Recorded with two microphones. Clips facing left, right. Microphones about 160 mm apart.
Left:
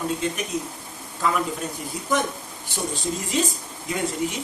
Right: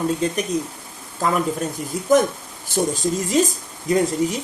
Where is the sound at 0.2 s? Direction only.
35° right (ahead or behind).